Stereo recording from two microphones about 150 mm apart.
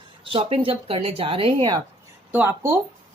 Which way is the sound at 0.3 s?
35° right (ahead or behind).